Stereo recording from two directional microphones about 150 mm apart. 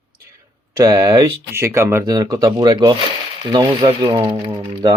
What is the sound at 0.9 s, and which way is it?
Speech, 25° right (ahead or behind).